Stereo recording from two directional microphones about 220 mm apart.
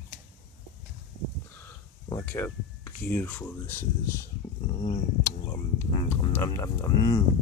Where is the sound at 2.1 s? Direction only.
10° left (ahead or behind).